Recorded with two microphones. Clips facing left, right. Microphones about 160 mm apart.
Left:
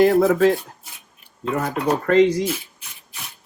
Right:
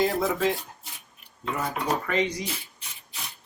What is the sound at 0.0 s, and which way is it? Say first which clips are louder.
Speech: left 10 dB; 60° left (ahead or behind).